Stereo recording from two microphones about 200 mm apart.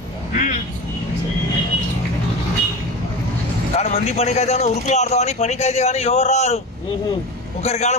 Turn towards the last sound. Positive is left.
turn(degrees=35)  # may be behind; listen again after turning